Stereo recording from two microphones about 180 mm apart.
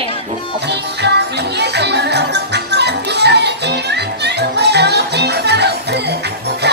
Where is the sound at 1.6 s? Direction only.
70° right (ahead or behind).